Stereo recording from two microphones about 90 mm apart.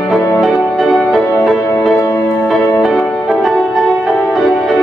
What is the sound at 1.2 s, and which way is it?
Music, 30° left (ahead or behind).